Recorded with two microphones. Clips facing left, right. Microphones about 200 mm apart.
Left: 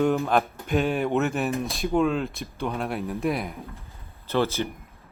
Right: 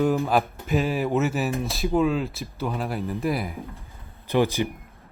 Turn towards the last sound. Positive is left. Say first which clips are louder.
# right 3 dB
turn(degrees=-15)  # may be behind; listen again after turning